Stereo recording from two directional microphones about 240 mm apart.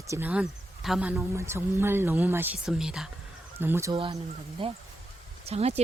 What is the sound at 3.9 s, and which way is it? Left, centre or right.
Speech, right.